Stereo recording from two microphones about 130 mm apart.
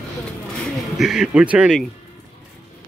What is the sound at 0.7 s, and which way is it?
Speech, 5° right (ahead or behind).